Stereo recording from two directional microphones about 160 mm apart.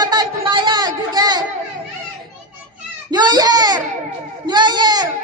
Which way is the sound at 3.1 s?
25° right (ahead or behind).